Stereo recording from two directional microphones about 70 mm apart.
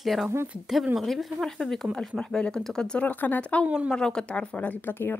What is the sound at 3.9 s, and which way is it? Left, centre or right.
Speech, centre.